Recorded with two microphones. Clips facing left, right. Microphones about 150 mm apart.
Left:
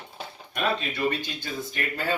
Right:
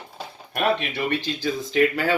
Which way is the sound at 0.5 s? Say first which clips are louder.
Right 5 dB; 65° right (ahead or behind).